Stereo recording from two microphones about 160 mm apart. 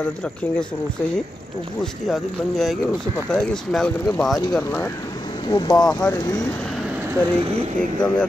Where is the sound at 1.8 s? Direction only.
Centre (ahead or behind).